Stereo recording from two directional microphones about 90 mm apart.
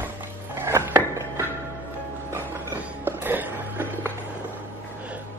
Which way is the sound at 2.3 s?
25° right (ahead or behind).